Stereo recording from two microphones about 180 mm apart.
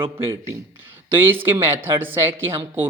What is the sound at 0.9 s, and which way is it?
A man's voice, 10° right (ahead or behind).